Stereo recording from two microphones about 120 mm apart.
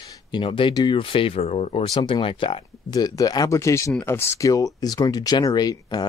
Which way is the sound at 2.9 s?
30° left (ahead or behind).